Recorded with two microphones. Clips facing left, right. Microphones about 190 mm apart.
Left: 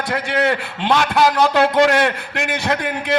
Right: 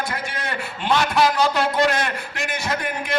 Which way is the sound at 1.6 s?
75° left (ahead or behind).